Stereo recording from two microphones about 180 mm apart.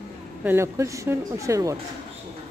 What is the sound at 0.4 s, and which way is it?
Speech, 10° right (ahead or behind).